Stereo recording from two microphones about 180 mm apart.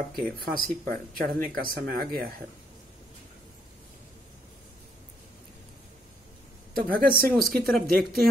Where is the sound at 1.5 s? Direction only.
55° right (ahead or behind).